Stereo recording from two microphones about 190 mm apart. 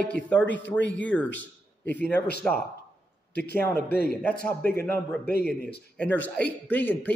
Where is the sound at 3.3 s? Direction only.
60° left (ahead or behind).